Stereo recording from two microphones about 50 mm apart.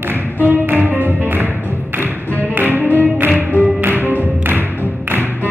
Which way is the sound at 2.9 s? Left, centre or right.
Right.